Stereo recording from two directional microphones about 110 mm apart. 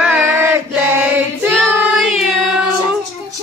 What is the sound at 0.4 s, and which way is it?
Choir, 15° right (ahead or behind).